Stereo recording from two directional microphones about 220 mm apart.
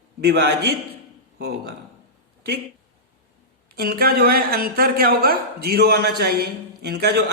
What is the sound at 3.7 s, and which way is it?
A man's voice, 45° right (ahead or behind).